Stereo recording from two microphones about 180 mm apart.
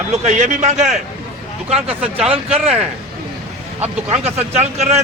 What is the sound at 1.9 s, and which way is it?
Speech, 5° right (ahead or behind).